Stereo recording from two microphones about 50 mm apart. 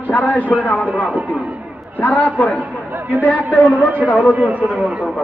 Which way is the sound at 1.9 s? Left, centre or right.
Left.